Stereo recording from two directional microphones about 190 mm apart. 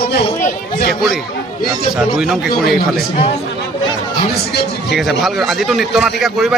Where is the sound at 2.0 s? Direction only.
Centre (ahead or behind).